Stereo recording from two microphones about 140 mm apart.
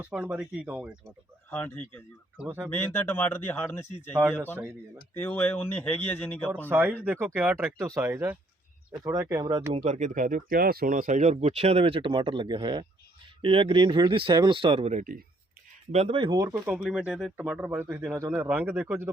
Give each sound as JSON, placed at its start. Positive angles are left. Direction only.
{"t": 0.0, "sound": "speech", "side_deg": -10}
{"t": 1.5, "sound": "speech", "side_deg": 15}
{"t": 2.4, "sound": "speech", "side_deg": -15}
{"t": 2.6, "sound": "speech", "side_deg": 15}
{"t": 5.2, "sound": "speech", "side_deg": 10}
{"t": 6.7, "sound": "speech", "side_deg": -15}
{"t": 7.8, "sound": "speech", "side_deg": -20}
{"t": 9.7, "sound": "speech", "side_deg": -60}
{"t": 16.4, "sound": "speech", "side_deg": -25}
{"t": 16.7, "sound": "speech", "side_deg": -5}